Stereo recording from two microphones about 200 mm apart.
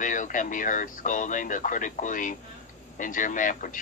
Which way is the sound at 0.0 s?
40° left (ahead or behind).